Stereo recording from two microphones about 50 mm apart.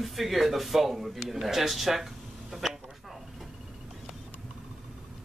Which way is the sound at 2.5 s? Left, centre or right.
Centre.